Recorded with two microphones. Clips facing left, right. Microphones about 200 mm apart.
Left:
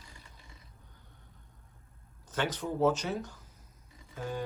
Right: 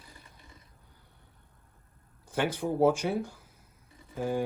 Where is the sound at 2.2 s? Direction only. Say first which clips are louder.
Right 4 dB; 10° right (ahead or behind).